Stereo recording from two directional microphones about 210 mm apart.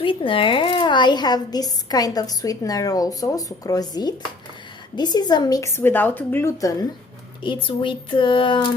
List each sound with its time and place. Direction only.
0.0 s speech: 25° left (ahead or behind)